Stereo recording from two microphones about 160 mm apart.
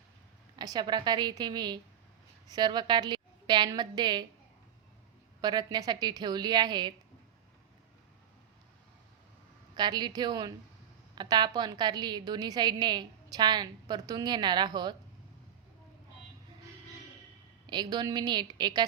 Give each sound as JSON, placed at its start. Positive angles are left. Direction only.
{"t": 0.5, "sound": "a woman's voice", "side_deg": -25}
{"t": 5.4, "sound": "a woman's voice", "side_deg": -25}
{"t": 9.7, "sound": "a woman's voice", "side_deg": -25}
{"t": 17.7, "sound": "a woman's voice", "side_deg": -25}